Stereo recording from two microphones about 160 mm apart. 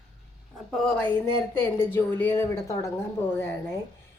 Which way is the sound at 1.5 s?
15° left (ahead or behind).